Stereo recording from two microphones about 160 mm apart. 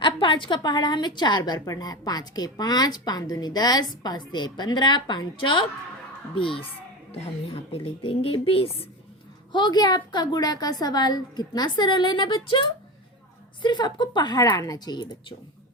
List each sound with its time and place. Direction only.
0.0 s a woman's voice: 30° left (ahead or behind)